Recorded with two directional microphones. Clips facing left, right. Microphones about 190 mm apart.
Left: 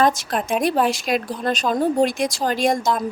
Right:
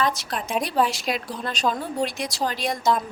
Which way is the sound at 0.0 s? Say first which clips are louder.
Left 6 dB; 45° left (ahead or behind).